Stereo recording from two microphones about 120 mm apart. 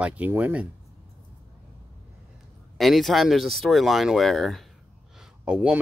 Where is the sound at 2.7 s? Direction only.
Centre (ahead or behind).